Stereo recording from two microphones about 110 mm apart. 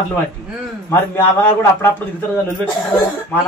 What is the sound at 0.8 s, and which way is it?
A man's voice, 25° left (ahead or behind).